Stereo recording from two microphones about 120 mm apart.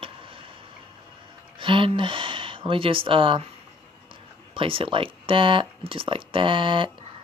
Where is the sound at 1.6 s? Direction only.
45° right (ahead or behind).